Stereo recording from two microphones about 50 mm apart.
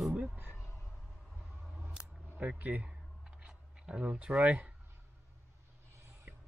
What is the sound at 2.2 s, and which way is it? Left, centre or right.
Speech, right.